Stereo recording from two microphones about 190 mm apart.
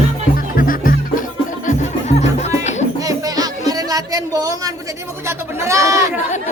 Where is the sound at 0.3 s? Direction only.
45° left (ahead or behind).